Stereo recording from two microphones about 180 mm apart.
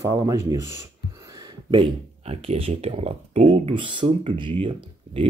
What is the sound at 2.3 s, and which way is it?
Speech, 30° right (ahead or behind).